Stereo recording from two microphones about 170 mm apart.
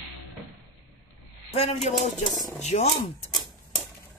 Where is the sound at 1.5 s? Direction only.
40° left (ahead or behind).